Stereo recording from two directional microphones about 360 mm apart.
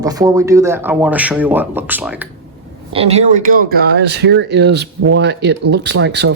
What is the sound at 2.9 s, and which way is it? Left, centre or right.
Speech, centre.